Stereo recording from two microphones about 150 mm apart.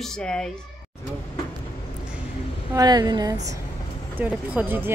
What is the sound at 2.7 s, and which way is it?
Speech, 25° right (ahead or behind).